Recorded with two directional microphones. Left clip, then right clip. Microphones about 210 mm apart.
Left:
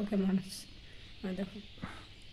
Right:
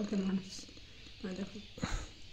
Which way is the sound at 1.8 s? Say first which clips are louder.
Right 6 dB; 25° right (ahead or behind).